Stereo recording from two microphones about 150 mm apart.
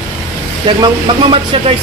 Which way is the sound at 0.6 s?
30° right (ahead or behind).